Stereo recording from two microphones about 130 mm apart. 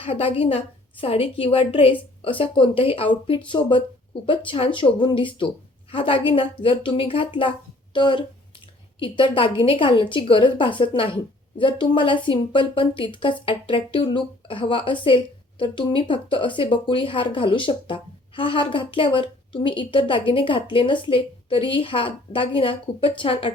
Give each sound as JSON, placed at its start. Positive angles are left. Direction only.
{"t": 0.0, "sound": "a woman's voice", "side_deg": 45}